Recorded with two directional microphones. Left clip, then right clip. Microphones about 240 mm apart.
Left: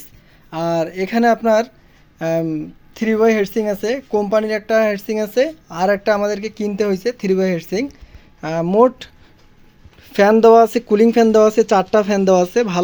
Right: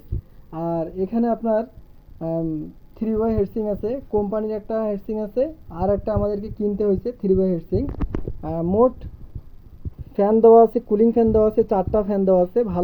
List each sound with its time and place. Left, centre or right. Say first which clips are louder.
0.5 s speech: left 6 dB; centre
0.9 s speech: left 7 dB; left
10.4 s speech: right 1 dB; centre